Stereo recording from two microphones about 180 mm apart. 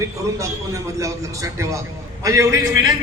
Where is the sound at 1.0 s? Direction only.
15° right (ahead or behind).